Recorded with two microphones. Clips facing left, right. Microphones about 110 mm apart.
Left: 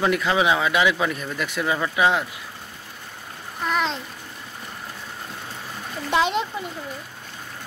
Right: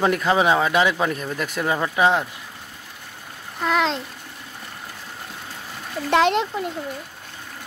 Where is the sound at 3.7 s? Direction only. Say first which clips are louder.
Right 3 dB; 90° right.